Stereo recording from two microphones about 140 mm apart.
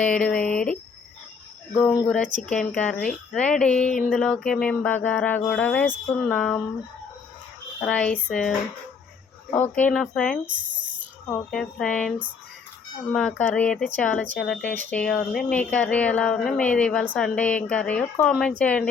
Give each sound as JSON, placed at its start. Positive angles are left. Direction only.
{"t": 0.0, "sound": "speech", "side_deg": 10}
{"t": 2.0, "sound": "speech", "side_deg": 10}
{"t": 4.1, "sound": "a sound", "side_deg": 5}
{"t": 4.6, "sound": "speech", "side_deg": 5}
{"t": 7.8, "sound": "speech", "side_deg": 10}
{"t": 8.3, "sound": "a sound", "side_deg": 5}
{"t": 9.5, "sound": "speech", "side_deg": 10}
{"t": 10.5, "sound": "speech", "side_deg": -35}
{"t": 11.3, "sound": "speech", "side_deg": 5}
{"t": 13.1, "sound": "speech", "side_deg": 10}